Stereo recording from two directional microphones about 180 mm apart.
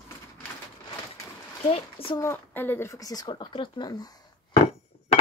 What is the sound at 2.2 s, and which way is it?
Speech, 10° left (ahead or behind).